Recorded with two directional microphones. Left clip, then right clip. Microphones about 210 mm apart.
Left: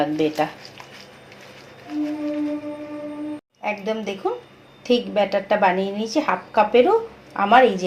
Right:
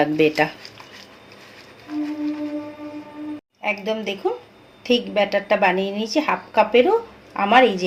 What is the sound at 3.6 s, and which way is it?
A woman's voice, 5° right (ahead or behind).